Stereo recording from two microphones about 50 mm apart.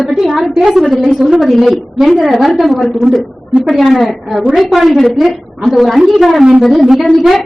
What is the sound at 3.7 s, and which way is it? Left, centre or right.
A woman's voice, centre.